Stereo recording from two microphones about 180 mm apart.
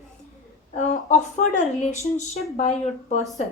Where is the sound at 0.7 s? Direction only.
40° left (ahead or behind).